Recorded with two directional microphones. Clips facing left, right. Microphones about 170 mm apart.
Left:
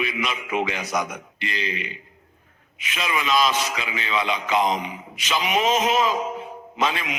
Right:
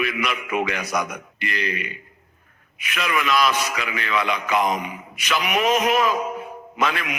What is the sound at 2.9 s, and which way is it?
A man's voice, 25° left (ahead or behind).